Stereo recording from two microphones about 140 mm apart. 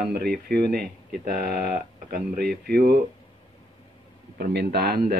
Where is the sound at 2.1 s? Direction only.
90° right.